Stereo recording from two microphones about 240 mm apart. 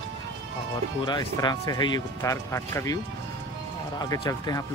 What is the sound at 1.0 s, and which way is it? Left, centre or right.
Speech, centre.